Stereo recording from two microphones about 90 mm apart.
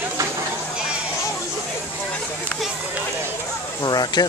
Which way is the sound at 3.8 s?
50° left (ahead or behind).